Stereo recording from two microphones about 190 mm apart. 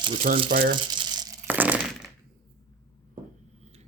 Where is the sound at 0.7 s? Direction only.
25° right (ahead or behind).